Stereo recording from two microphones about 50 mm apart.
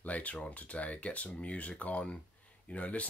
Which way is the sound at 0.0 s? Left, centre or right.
Left.